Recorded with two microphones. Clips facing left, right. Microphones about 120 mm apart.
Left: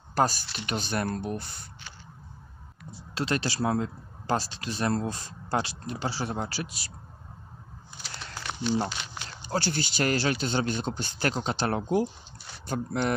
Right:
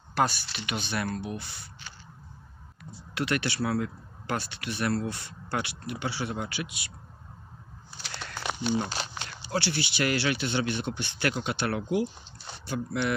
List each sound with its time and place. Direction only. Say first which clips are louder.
0.1 s speech: left 1 dB; 40° left (ahead or behind)
3.2 s speech: even; 30° left (ahead or behind)
8.9 s a sound: right 3 dB; 35° right (ahead or behind)
9.4 s speech: left 1 dB; 45° left (ahead or behind)